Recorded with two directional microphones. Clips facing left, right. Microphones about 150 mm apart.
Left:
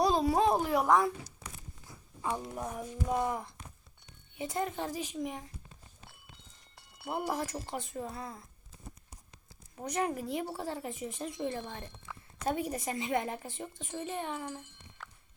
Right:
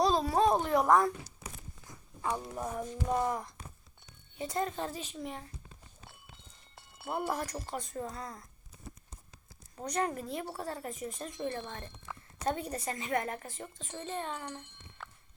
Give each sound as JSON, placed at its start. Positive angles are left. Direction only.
{"t": 0.0, "sound": "a woman's voice", "side_deg": 15}
{"t": 7.1, "sound": "speech", "side_deg": 20}
{"t": 7.9, "sound": "speech", "side_deg": 5}
{"t": 9.9, "sound": "a woman's voice", "side_deg": 15}
{"t": 12.1, "sound": "a sound", "side_deg": -30}
{"t": 12.5, "sound": "a woman's voice", "side_deg": 10}